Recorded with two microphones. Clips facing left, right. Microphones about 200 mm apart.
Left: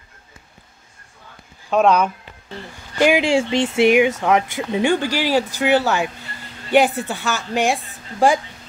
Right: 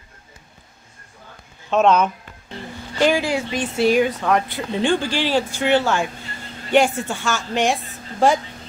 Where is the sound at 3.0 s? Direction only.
15° left (ahead or behind).